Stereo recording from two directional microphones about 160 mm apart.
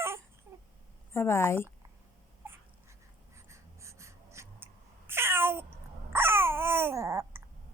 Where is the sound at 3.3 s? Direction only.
15° right (ahead or behind).